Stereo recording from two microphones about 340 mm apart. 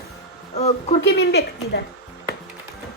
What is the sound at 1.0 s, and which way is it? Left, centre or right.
Speech, left.